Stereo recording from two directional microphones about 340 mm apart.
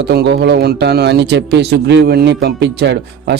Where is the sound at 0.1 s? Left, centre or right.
Right.